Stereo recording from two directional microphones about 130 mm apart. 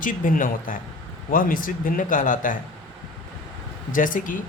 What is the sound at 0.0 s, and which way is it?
A man's voice, 90° left.